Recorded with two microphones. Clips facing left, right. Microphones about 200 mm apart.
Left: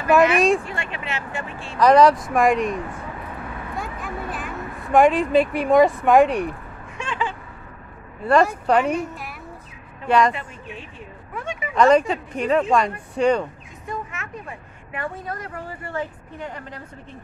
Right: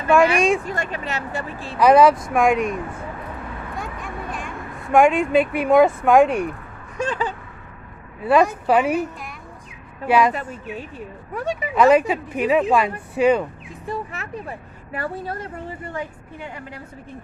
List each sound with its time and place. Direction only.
0.1 s speech: centre (ahead or behind)
0.7 s speech: 40° right (ahead or behind)
1.8 s speech: 5° right (ahead or behind)
3.7 s a sound: centre (ahead or behind)
6.0 s speech: centre (ahead or behind)
7.0 s a sound: 40° right (ahead or behind)
8.2 s speech: 5° right (ahead or behind)
10.5 s speech: 40° right (ahead or behind)
11.7 s speech: 5° right (ahead or behind)
13.8 s a woman's voice: 35° right (ahead or behind); by 16.8 s 10° right (ahead or behind)